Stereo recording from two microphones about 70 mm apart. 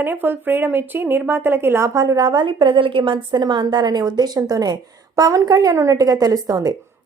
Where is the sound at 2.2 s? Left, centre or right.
Right.